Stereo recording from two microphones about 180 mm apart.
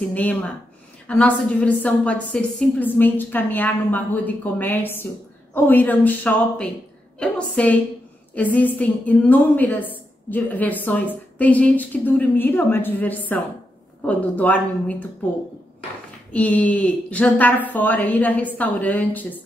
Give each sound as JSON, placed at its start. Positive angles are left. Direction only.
{"t": 0.1, "sound": "a woman's voice", "side_deg": 10}
{"t": 16.3, "sound": "a woman's voice", "side_deg": 10}